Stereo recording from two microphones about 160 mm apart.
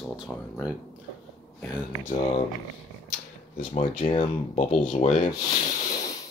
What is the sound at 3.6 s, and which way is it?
Speech, 40° left (ahead or behind).